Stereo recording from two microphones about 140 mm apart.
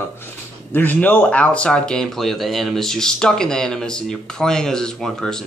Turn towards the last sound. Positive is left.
turn(degrees=5)  # may be behind; listen again after turning